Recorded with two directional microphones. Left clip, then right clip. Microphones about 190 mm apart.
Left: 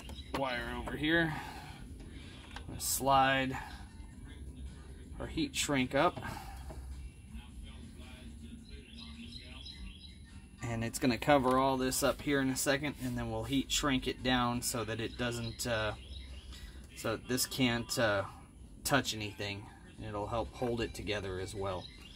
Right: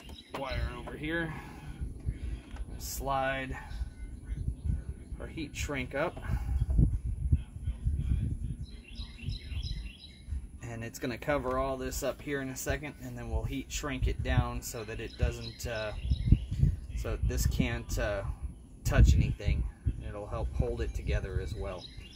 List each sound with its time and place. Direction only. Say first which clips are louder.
0.4 s speech: left 2 dB; 45° left (ahead or behind)
2.9 s speech: left 4 dB; 45° left (ahead or behind)
5.3 s speech: left 4 dB; 45° left (ahead or behind)
10.6 s speech: left 4 dB; 45° left (ahead or behind)
17.0 s speech: left 3 dB; 45° left (ahead or behind)